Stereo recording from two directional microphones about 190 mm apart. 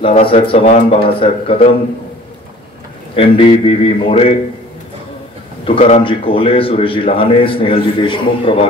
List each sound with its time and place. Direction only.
0.2 s a man's voice: 30° left (ahead or behind)
3.2 s a man's voice: 30° left (ahead or behind)
5.7 s a man's voice: 30° left (ahead or behind)